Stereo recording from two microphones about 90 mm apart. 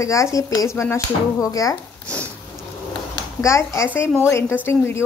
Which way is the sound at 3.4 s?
35° left (ahead or behind).